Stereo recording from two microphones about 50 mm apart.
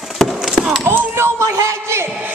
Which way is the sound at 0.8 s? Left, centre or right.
Right.